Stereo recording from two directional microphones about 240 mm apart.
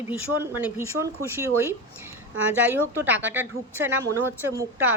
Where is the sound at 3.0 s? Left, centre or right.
Centre.